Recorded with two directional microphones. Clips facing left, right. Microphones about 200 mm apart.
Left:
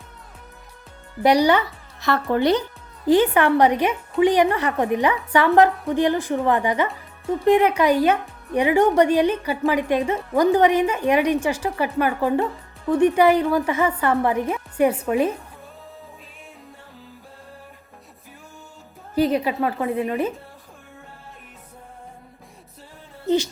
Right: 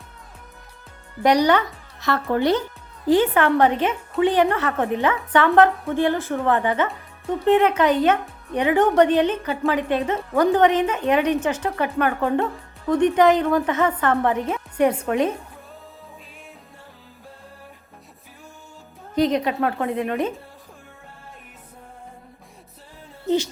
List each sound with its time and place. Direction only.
1.2 s speech: 10° left (ahead or behind)
19.1 s a woman's voice: 5° left (ahead or behind)